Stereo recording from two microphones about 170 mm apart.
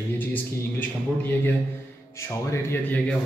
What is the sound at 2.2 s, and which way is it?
Speech, 15° left (ahead or behind).